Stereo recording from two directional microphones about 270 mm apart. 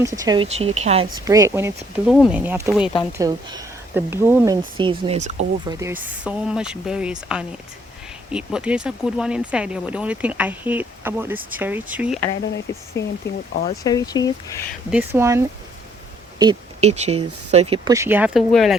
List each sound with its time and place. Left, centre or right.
0.0 s speech: centre
5.6 s speech: centre
13.0 s speech: centre
13.5 s speech: left
13.8 s speech: centre
14.8 s speech: centre